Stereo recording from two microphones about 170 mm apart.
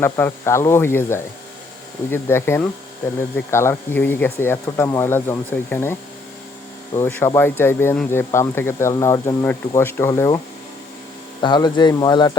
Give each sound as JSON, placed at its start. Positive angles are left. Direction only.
{"t": 0.0, "sound": "speech", "side_deg": 15}
{"t": 11.4, "sound": "speech", "side_deg": 25}